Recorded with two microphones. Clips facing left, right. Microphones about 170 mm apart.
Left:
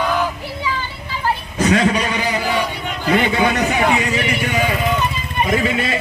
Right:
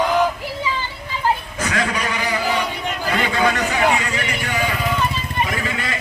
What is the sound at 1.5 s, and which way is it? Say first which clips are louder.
A man's voice: left 7 dB; 25° left (ahead or behind).